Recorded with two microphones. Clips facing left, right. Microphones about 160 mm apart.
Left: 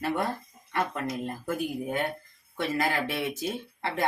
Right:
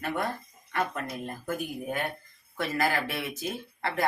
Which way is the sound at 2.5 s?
25° left (ahead or behind).